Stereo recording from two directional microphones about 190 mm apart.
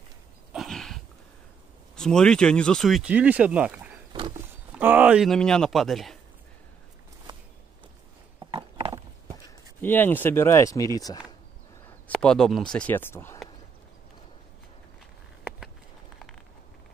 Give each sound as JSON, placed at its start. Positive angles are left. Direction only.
{"t": 0.5, "sound": "dog", "side_deg": 0}
{"t": 2.0, "sound": "speech", "side_deg": 5}
{"t": 8.5, "sound": "clip-clop", "side_deg": -30}
{"t": 9.8, "sound": "speech", "side_deg": 10}
{"t": 12.1, "sound": "speech", "side_deg": 5}